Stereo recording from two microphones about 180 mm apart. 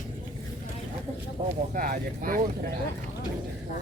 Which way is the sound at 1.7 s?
50° right (ahead or behind).